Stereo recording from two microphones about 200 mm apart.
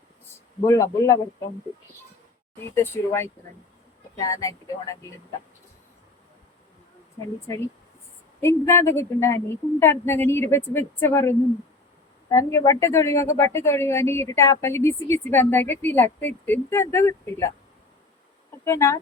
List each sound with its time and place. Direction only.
0.6 s a woman's voice: 15° left (ahead or behind)
2.7 s a woman's voice: 10° left (ahead or behind)
8.4 s a woman's voice: 10° left (ahead or behind)
18.6 s a woman's voice: 15° left (ahead or behind)